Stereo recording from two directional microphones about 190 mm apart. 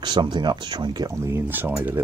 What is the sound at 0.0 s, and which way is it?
Speech, 25° right (ahead or behind).